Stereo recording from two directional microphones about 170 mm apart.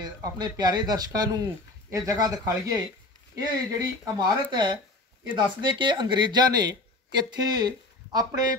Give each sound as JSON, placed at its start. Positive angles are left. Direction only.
{"t": 0.0, "sound": "speech", "side_deg": -25}